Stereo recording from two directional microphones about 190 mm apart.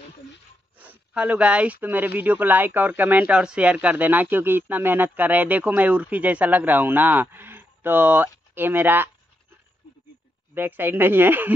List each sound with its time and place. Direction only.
0.7 s speech: 5° right (ahead or behind)
10.5 s speech: 10° right (ahead or behind)